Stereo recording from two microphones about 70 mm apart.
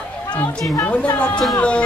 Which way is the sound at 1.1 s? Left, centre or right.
Centre.